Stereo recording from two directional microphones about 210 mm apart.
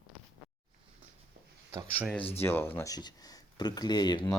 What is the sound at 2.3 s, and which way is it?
Speech, 10° left (ahead or behind).